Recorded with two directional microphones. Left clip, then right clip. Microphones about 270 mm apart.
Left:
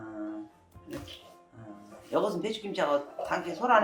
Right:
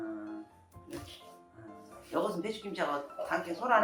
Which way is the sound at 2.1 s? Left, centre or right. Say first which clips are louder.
Left 4 dB; left.